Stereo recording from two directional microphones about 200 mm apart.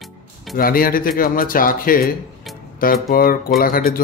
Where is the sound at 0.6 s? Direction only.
45° left (ahead or behind).